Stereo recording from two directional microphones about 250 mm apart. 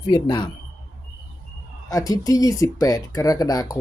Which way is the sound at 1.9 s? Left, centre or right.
Centre.